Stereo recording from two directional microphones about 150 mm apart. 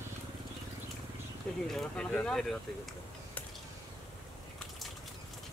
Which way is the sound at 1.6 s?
5° left (ahead or behind).